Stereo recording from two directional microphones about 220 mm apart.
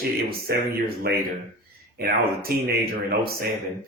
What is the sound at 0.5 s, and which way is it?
Speech, 45° right (ahead or behind).